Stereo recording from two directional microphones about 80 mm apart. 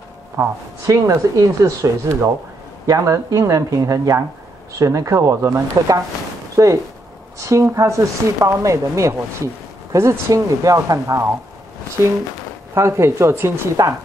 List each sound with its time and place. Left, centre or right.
0.8 s speech: right
12.7 s speech: right